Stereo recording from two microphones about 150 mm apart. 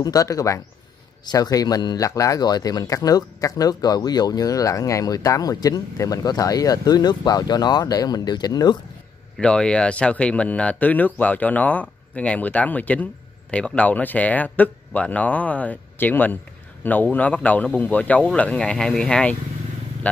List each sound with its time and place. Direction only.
0.0 s speech: 25° left (ahead or behind)
9.4 s speech: 5° left (ahead or behind)